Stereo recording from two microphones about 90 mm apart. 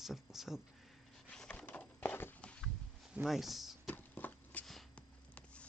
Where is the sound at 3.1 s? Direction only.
5° right (ahead or behind).